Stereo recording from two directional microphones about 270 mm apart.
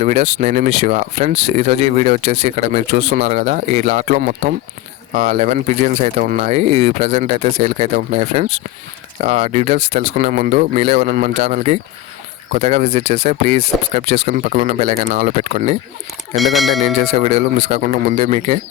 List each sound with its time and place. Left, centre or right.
0.0 s speech: right
16.3 s speech: centre
16.8 s speech: right